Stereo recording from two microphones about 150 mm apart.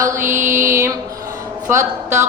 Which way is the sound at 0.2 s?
60° right (ahead or behind).